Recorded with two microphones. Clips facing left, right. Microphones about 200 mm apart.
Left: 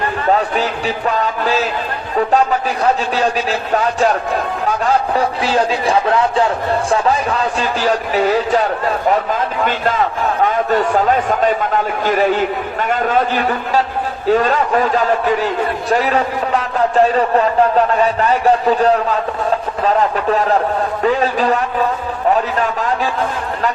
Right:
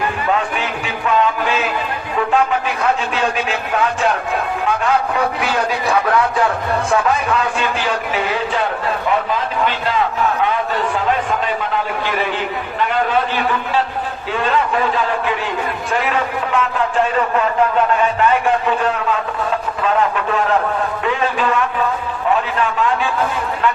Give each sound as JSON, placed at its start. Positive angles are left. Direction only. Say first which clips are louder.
{"t": 0.3, "sound": "a man's voice", "louder": "left 7 dB", "side_deg": 35}
{"t": 5.1, "sound": "a man's voice", "louder": "left 3 dB", "side_deg": 30}
{"t": 9.0, "sound": "a man's voice", "louder": "left 3 dB", "side_deg": 45}